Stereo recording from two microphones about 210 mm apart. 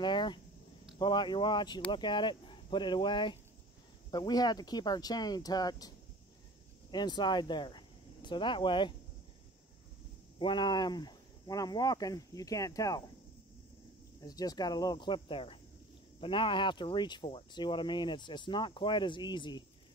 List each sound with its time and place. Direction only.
0.0 s speech: 20° left (ahead or behind)
10.4 s speech: 20° left (ahead or behind)
14.2 s speech: 20° left (ahead or behind)